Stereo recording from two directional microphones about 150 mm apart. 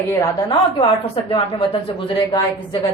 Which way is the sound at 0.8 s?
35° left (ahead or behind).